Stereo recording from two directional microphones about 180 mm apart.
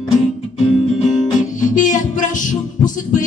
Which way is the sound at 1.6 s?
45° left (ahead or behind).